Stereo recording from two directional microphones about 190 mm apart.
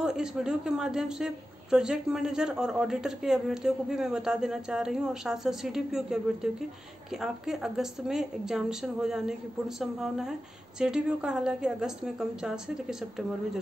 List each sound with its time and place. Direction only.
0.0 s a woman's voice: 5° right (ahead or behind)